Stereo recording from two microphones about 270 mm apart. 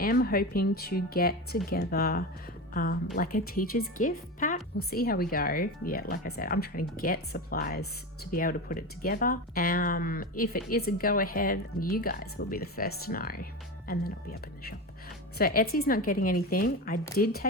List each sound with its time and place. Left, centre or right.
0.0 s speech: left
15.4 s speech: left